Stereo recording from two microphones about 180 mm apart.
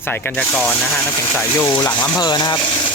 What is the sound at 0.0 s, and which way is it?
Speech, 10° left (ahead or behind).